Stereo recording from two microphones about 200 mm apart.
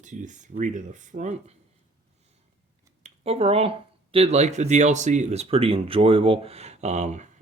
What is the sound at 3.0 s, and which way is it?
Speech, 30° right (ahead or behind).